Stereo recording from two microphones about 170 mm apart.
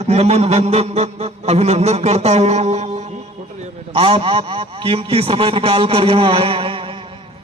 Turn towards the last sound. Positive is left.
turn(degrees=-30)  # may be behind; listen again after turning